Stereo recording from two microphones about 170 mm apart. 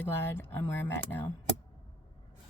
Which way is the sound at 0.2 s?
10° left (ahead or behind).